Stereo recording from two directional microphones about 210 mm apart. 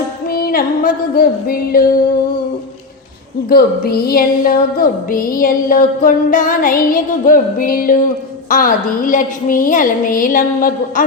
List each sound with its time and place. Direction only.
0.3 s music: 45° left (ahead or behind)
3.5 s music: 45° left (ahead or behind)